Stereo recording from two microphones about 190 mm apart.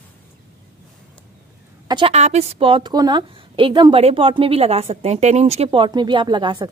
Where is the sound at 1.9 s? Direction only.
30° right (ahead or behind).